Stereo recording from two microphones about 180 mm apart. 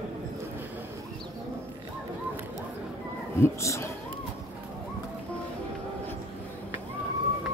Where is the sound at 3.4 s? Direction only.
15° left (ahead or behind).